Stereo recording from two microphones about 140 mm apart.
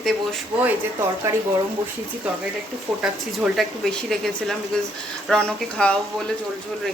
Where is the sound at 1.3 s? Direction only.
20° right (ahead or behind).